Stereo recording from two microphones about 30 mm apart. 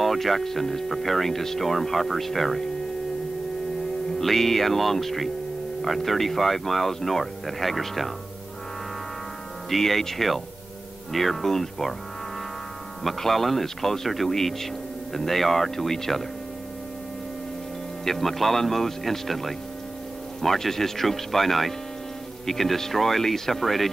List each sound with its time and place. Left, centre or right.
0.0 s speech: centre
4.2 s speech: centre
9.7 s speech: centre
13.2 s speech: centre
18.0 s speech: centre